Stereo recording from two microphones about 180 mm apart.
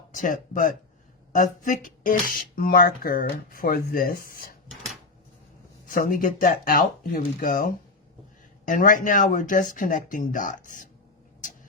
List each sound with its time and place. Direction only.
0.1 s speech: 45° left (ahead or behind)
5.8 s speech: 50° left (ahead or behind)